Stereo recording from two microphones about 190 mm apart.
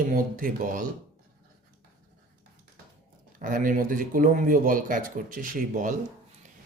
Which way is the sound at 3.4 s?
45° right (ahead or behind).